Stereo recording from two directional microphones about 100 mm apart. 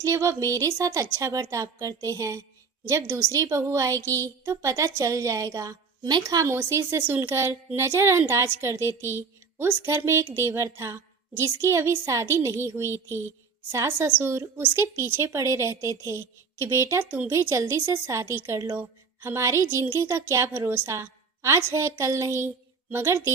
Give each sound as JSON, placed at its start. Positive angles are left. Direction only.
{"t": 0.0, "sound": "a woman's voice", "side_deg": -30}